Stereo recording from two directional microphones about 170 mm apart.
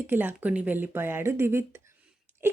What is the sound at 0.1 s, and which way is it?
A woman's voice, 10° right (ahead or behind).